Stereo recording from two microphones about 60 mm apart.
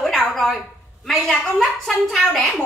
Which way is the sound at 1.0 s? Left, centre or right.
Centre.